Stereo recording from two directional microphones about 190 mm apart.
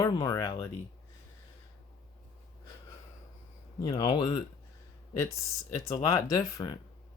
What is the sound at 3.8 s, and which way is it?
Speech, 20° left (ahead or behind).